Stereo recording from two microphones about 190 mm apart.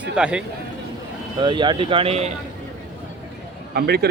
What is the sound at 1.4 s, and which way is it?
Speech, 25° right (ahead or behind).